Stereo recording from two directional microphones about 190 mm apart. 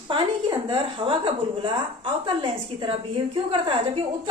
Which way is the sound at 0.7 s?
25° right (ahead or behind).